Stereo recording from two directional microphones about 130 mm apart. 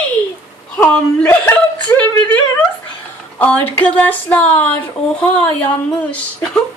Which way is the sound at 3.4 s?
10° left (ahead or behind).